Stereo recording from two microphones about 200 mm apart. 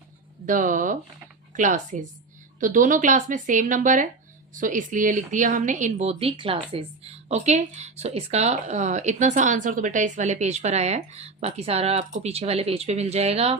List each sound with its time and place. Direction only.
0.4 s speech: 40° right (ahead or behind)